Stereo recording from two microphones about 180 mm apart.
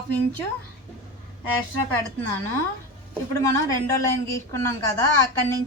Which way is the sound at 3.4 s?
15° left (ahead or behind).